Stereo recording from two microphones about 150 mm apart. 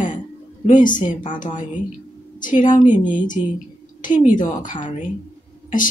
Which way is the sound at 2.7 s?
60° left (ahead or behind).